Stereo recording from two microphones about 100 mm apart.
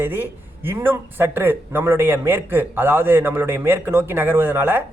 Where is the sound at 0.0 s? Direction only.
20° right (ahead or behind).